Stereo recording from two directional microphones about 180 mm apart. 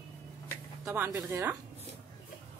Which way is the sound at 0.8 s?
10° right (ahead or behind).